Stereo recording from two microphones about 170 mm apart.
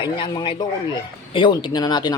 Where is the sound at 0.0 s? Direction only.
25° left (ahead or behind).